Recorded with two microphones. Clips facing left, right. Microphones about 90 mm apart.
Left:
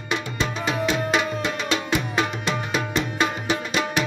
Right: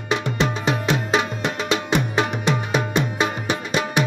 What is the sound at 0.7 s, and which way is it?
Music, 25° right (ahead or behind).